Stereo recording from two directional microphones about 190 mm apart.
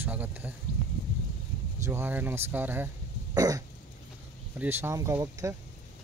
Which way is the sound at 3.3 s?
20° right (ahead or behind).